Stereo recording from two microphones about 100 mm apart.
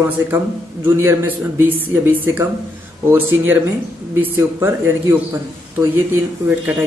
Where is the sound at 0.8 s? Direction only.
20° right (ahead or behind).